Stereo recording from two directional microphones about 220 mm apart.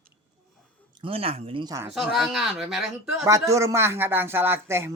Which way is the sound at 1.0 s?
25° right (ahead or behind).